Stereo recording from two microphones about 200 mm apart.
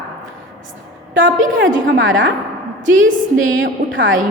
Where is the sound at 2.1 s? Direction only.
70° right (ahead or behind).